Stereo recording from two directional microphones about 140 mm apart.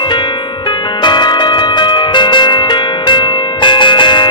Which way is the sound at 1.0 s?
30° left (ahead or behind).